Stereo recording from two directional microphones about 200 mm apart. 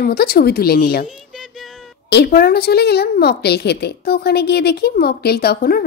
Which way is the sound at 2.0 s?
55° left (ahead or behind).